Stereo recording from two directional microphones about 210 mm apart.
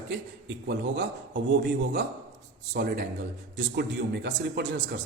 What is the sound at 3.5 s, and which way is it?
A man's voice, 55° right (ahead or behind).